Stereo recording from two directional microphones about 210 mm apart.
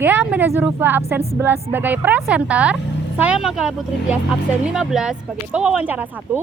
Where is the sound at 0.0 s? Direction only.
10° right (ahead or behind).